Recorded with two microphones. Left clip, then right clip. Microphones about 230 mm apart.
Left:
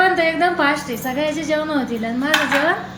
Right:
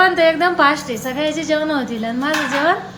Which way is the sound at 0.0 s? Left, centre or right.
Centre.